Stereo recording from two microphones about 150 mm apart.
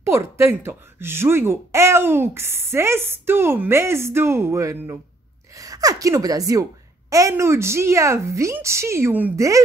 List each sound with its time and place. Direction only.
0.0 s a woman's voice: 20° right (ahead or behind)